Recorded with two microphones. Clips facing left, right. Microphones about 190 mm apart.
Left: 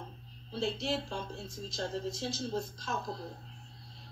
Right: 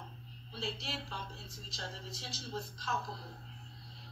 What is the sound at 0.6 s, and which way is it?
Speech, 50° left (ahead or behind).